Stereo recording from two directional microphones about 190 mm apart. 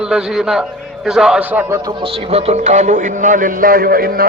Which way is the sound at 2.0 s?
30° right (ahead or behind).